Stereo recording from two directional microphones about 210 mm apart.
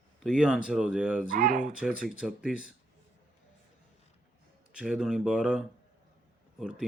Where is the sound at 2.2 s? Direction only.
5° right (ahead or behind).